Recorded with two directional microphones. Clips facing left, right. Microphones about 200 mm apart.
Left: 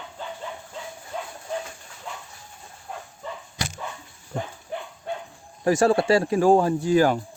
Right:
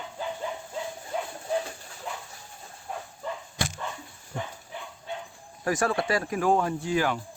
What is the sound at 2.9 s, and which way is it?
Bow-wow, centre (ahead or behind).